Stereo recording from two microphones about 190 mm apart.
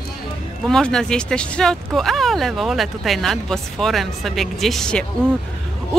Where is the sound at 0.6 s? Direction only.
5° left (ahead or behind).